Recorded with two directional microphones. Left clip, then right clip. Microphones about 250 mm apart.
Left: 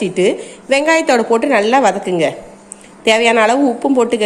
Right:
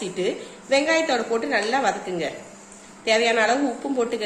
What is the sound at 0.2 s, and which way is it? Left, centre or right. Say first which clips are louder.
A woman's voice: left 11 dB; left.